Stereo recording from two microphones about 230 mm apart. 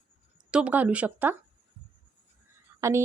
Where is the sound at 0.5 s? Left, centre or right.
Centre.